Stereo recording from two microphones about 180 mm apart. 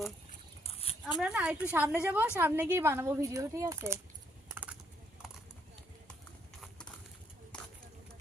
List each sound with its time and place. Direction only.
0.3 s a sound: 35° left (ahead or behind)
1.2 s a woman's voice: 5° right (ahead or behind)
4.4 s typing: 10° right (ahead or behind)